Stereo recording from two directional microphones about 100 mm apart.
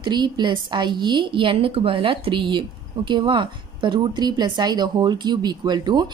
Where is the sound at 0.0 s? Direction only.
50° right (ahead or behind).